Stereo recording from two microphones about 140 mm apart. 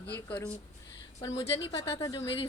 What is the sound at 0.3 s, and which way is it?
Speech, 10° left (ahead or behind).